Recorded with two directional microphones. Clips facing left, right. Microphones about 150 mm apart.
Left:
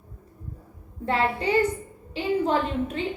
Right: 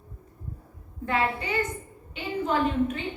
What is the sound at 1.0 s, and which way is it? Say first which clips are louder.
A woman's voice: left 3 dB; 30° left (ahead or behind).